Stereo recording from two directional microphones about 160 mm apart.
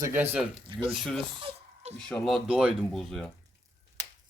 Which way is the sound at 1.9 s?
5° left (ahead or behind).